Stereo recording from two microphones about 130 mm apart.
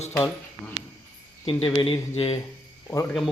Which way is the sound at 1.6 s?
40° left (ahead or behind).